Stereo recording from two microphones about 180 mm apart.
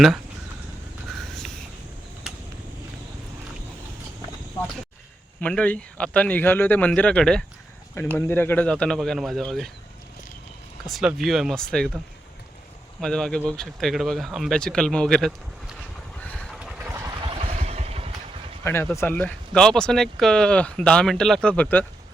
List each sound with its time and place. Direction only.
1.1 s a sound: centre (ahead or behind)
5.4 s a man's voice: 5° left (ahead or behind)
10.8 s speech: centre (ahead or behind)
13.0 s speech: 5° left (ahead or behind)
16.3 s vehicle: 5° left (ahead or behind)
16.6 s vehicle: 5° right (ahead or behind)
17.2 s vehicle: 30° right (ahead or behind)
18.6 s speech: 15° left (ahead or behind)